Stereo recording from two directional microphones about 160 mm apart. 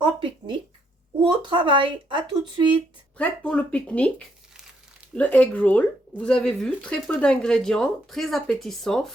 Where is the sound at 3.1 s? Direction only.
10° left (ahead or behind).